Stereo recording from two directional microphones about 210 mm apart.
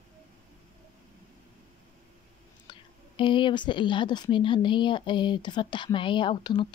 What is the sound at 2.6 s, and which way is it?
A woman's voice, 25° left (ahead or behind).